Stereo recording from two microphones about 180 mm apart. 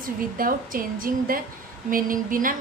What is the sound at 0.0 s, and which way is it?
A woman's voice, 50° right (ahead or behind).